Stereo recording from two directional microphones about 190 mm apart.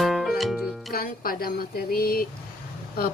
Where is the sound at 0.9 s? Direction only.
50° left (ahead or behind).